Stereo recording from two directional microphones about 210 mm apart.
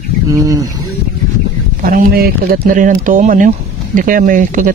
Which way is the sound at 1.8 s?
40° right (ahead or behind).